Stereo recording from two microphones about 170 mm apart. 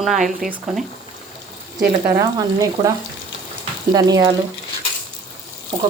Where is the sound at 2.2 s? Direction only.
20° right (ahead or behind).